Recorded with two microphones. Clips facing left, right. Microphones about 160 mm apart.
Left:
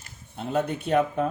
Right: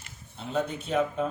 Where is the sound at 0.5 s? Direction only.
65° left (ahead or behind).